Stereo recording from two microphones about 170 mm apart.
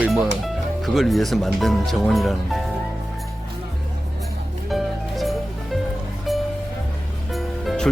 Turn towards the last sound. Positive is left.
turn(degrees=0)  # may be behind; listen again after turning